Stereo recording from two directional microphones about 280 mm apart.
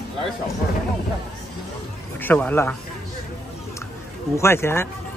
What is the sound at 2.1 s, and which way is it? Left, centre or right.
Speech, centre.